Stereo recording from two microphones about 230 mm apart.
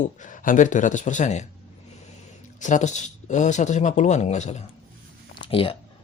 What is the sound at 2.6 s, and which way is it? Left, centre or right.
Speech, left.